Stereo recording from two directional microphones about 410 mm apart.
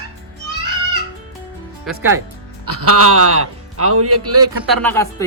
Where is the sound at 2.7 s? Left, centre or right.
Right.